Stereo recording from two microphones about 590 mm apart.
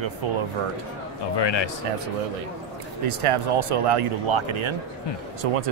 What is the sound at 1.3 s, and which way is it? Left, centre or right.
Speech, left.